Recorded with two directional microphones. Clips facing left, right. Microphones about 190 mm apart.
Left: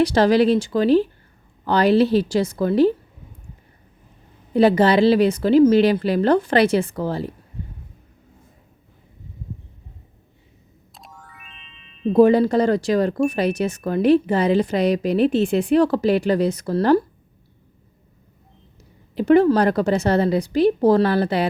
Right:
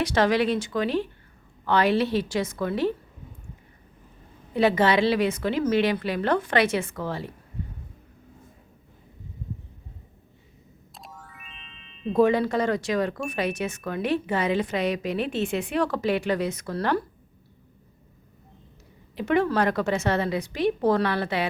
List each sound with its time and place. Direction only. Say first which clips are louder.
0.0 s speech: left 7 dB; 35° left (ahead or behind)
4.5 s speech: left 6 dB; 35° left (ahead or behind)
10.9 s music: even; centre (ahead or behind)
12.1 s speech: left 7 dB; 35° left (ahead or behind)
19.1 s speech: left 8 dB; 35° left (ahead or behind)